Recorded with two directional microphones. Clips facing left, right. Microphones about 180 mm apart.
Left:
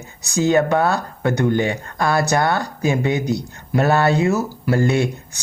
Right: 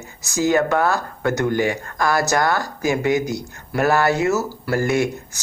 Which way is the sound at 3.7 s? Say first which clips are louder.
Left 1 dB; 20° left (ahead or behind).